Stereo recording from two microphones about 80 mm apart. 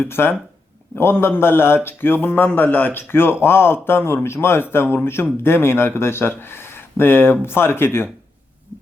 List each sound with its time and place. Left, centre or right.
0.0 s speech: left